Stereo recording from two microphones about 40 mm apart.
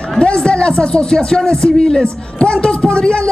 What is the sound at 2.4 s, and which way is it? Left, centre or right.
Speech, left.